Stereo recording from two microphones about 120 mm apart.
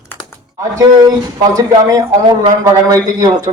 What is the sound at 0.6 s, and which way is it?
Speech, 30° right (ahead or behind).